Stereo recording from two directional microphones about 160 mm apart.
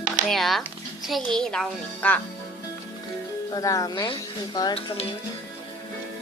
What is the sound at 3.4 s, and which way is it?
Speech, 20° left (ahead or behind).